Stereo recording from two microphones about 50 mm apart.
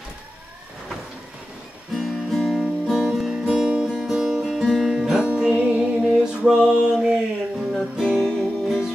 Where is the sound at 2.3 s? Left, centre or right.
Centre.